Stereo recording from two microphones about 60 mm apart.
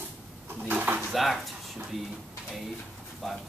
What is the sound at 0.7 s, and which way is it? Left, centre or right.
Speech, right.